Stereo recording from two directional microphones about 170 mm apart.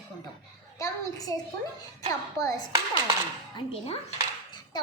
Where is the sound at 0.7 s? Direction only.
20° left (ahead or behind).